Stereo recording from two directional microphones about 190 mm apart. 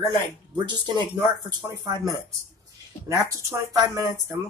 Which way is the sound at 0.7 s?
25° right (ahead or behind).